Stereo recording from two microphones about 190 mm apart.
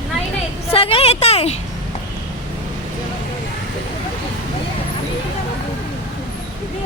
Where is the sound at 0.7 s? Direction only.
30° left (ahead or behind).